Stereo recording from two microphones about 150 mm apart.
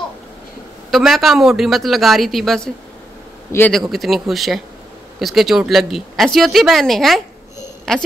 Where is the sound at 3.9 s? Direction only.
Centre (ahead or behind).